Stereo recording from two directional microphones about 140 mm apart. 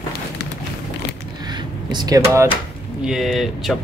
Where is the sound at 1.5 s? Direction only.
30° right (ahead or behind).